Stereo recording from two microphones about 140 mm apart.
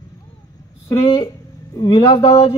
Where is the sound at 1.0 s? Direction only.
40° left (ahead or behind).